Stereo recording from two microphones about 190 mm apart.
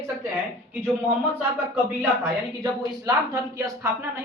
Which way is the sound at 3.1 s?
20° right (ahead or behind).